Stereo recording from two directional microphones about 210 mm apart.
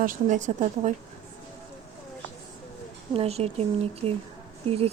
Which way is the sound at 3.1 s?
30° right (ahead or behind).